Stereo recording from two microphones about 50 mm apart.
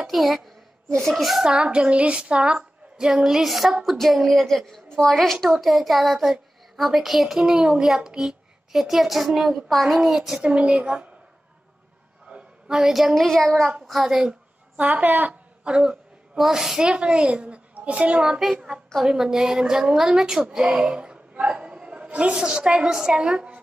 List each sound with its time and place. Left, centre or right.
0.0 s a woman's voice: centre
0.9 s a child's voice: centre
1.4 s a woman's voice: centre
10.4 s a woman's voice: right
12.3 s a sound: right
12.7 s a woman's voice: centre
14.8 s a woman's voice: right
15.6 s speech: centre
16.3 s a woman's voice: centre; by 18.2 s right
18.4 s a woman's voice: centre; by 23.6 s right